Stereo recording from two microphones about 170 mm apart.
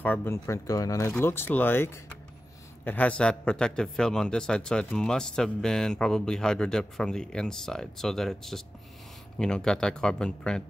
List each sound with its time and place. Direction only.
0.0 s a man's voice: 10° left (ahead or behind)